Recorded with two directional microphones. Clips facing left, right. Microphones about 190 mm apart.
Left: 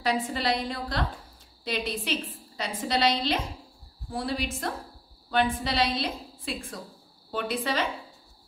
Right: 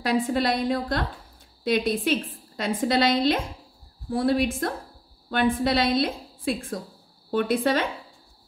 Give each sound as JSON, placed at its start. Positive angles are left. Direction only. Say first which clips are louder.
{"t": 0.3, "sound": "a woman's voice", "louder": "right 6 dB", "side_deg": -50}